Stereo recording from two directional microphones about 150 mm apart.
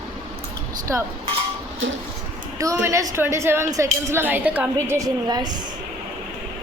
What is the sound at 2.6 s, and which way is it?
A woman's voice, 20° right (ahead or behind).